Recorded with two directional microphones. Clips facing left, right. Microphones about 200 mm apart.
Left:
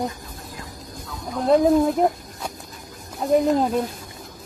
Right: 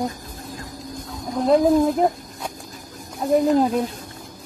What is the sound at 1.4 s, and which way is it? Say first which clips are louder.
Speech: even; centre (ahead or behind).